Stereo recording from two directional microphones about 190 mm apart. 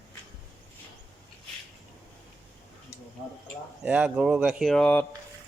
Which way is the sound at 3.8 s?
5° right (ahead or behind).